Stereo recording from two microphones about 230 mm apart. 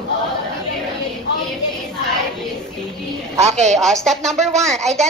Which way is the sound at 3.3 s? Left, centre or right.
Right.